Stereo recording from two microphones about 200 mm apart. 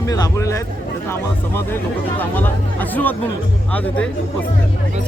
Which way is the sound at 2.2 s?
10° left (ahead or behind).